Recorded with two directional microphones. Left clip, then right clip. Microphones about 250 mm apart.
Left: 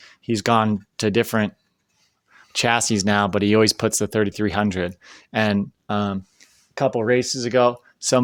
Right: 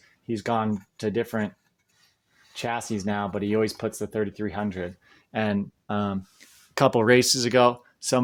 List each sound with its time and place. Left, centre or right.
0.0 s speech: left
5.0 s speech: left
6.7 s speech: centre